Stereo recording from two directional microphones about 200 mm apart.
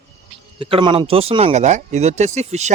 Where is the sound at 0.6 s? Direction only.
25° right (ahead or behind).